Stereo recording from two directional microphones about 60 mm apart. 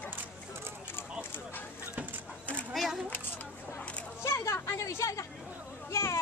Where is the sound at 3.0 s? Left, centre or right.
Left.